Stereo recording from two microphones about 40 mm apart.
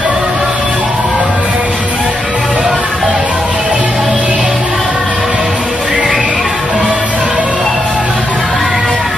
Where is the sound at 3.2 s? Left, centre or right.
Right.